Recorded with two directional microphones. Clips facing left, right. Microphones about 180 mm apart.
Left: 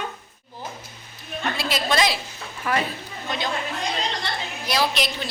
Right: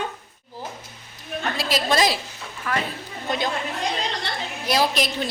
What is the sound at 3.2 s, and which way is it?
Speech, 50° right (ahead or behind).